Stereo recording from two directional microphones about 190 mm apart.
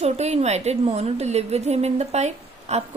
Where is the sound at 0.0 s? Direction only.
35° right (ahead or behind).